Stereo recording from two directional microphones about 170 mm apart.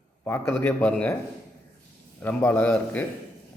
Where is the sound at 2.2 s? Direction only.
10° left (ahead or behind).